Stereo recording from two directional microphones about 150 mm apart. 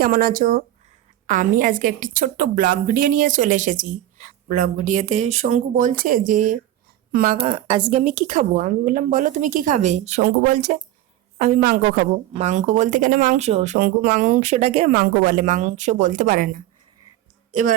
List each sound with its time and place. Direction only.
0.0 s a woman's voice: 75° right (ahead or behind)
1.3 s a woman's voice: 60° right (ahead or behind)
7.1 s speech: 80° right
7.4 s speech: 40° right (ahead or behind)
8.0 s a woman's voice: 60° right (ahead or behind)
11.3 s a woman's voice: 65° right (ahead or behind); by 12.0 s 90° right
12.3 s speech: 50° right (ahead or behind)
13.7 s a woman's voice: 70° right (ahead or behind)
14.4 s speech: 45° right (ahead or behind)
14.8 s a woman's voice: 80° right; by 17.7 s 60° right (ahead or behind)